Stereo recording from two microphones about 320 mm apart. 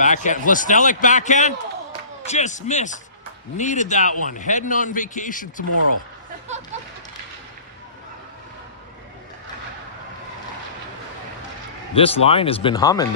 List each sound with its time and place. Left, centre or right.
0.0 s a man's voice: left
11.9 s speech: centre